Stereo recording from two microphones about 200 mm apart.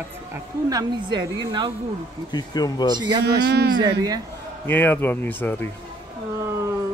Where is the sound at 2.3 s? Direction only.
20° left (ahead or behind).